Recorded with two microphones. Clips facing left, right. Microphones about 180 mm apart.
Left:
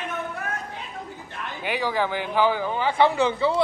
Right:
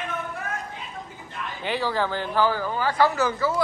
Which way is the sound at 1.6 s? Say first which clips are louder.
Even; 15° left (ahead or behind).